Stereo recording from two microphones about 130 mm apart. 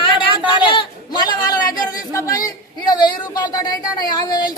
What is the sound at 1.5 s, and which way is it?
Speech, 30° left (ahead or behind).